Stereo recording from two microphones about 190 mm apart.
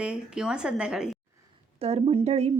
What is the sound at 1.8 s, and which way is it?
Speech, 30° right (ahead or behind).